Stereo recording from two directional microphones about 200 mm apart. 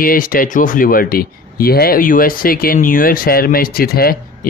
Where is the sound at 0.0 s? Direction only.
45° left (ahead or behind).